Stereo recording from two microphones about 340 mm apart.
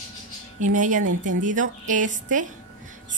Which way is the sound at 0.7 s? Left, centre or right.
Right.